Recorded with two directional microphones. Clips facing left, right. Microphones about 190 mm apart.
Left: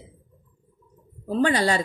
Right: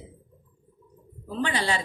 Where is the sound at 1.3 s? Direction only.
45° left (ahead or behind).